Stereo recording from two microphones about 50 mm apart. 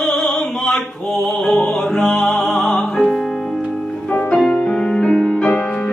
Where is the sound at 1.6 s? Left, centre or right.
Left.